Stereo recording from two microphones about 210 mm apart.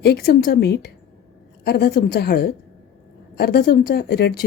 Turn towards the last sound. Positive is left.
turn(degrees=50)  # may be behind; listen again after turning